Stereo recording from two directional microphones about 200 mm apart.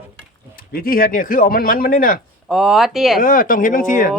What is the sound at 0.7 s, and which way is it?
Speech, 45° left (ahead or behind).